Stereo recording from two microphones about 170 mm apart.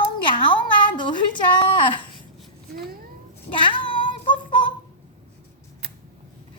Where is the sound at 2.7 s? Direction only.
65° right (ahead or behind).